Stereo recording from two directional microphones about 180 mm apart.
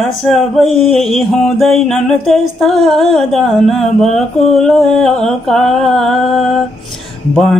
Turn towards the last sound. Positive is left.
turn(degrees=0)  # may be behind; listen again after turning